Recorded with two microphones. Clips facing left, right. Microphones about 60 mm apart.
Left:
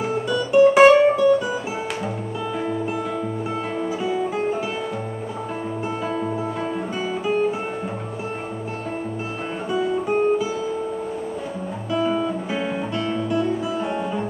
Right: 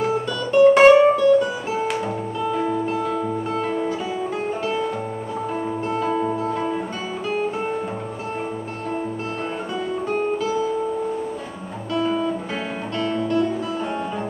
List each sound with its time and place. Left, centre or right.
0.0 s music: centre
2.5 s music: centre
6.3 s music: centre
9.7 s guitar: centre
11.9 s guitar: centre